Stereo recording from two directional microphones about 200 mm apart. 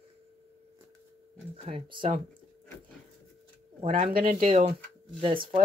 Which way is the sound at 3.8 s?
40° right (ahead or behind).